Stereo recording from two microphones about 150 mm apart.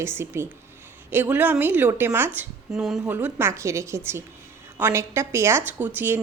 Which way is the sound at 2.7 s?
Centre (ahead or behind).